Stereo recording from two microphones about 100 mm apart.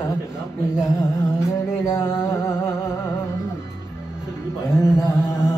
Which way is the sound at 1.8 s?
25° left (ahead or behind).